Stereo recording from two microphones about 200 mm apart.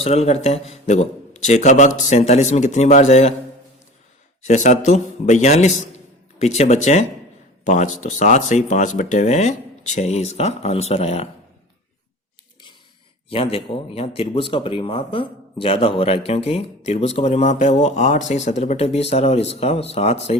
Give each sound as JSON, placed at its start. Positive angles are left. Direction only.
{"t": 0.0, "sound": "speech", "side_deg": 30}
{"t": 4.4, "sound": "speech", "side_deg": 40}
{"t": 13.3, "sound": "speech", "side_deg": 30}